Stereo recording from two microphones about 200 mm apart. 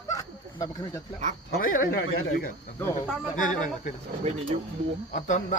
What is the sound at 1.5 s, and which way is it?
Speech, 45° left (ahead or behind).